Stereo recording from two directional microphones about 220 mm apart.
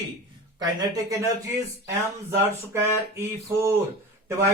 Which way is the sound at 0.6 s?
15° right (ahead or behind).